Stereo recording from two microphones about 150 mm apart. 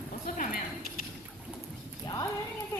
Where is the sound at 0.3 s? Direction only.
70° left (ahead or behind).